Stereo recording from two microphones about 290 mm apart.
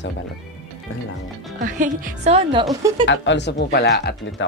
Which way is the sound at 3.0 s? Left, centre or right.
Left.